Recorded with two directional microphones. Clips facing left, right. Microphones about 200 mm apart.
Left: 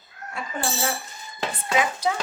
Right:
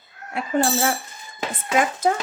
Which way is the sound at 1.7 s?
50° right (ahead or behind).